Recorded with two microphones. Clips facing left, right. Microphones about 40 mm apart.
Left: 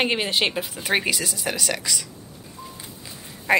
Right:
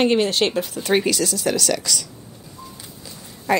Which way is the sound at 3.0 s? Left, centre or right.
Left.